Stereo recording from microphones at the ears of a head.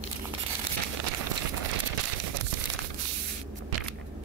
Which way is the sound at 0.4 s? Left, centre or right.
Right.